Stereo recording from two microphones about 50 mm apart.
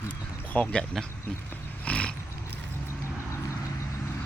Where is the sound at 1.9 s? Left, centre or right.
Left.